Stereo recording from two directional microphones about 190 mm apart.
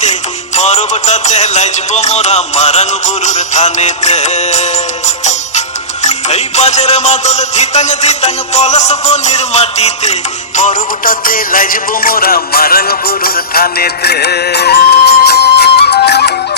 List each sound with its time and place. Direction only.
0.0 s music: 40° left (ahead or behind); by 16.3 s 60° left (ahead or behind)